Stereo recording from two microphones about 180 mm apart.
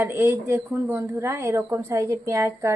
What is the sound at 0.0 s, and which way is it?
A woman's voice, 15° right (ahead or behind).